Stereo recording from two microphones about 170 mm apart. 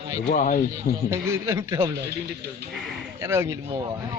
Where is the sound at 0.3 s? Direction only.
50° left (ahead or behind).